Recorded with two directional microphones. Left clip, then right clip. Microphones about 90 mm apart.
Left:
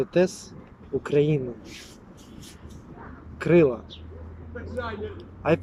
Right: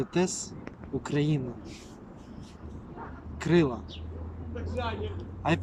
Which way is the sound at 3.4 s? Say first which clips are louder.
Left 7 dB; 40° right (ahead or behind).